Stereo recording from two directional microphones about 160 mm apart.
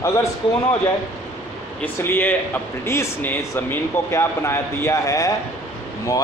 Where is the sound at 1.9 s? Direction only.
15° left (ahead or behind).